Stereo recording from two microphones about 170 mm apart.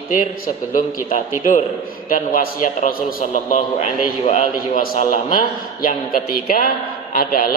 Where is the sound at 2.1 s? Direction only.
55° left (ahead or behind).